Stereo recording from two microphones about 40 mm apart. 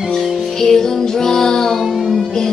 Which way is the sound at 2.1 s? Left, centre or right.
Centre.